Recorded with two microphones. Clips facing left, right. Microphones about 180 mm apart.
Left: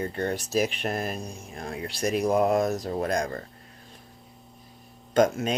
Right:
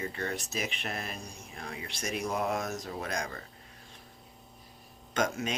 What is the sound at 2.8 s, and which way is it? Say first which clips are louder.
Speech: left 9 dB; 50° left (ahead or behind).